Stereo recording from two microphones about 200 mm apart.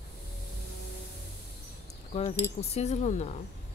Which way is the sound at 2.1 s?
35° left (ahead or behind).